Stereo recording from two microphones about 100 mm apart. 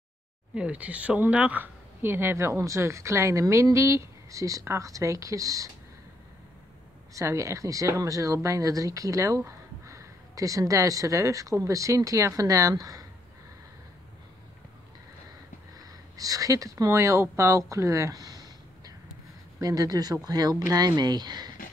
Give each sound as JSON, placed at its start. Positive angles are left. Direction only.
{"t": 0.6, "sound": "speech", "side_deg": -15}
{"t": 7.2, "sound": "speech", "side_deg": -30}
{"t": 16.2, "sound": "speech", "side_deg": -35}